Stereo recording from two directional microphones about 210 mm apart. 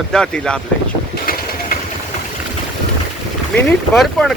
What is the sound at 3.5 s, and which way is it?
Speech, 5° left (ahead or behind).